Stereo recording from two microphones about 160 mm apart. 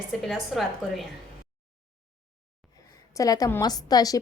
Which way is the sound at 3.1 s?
20° left (ahead or behind).